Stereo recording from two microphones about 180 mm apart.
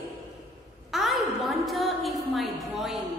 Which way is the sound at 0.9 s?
Centre (ahead or behind).